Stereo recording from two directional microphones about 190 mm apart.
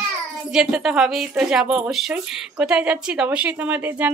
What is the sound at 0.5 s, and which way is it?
A woman's voice, 5° right (ahead or behind).